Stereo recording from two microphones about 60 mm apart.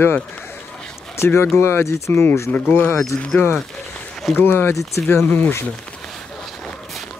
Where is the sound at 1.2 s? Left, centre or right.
Left.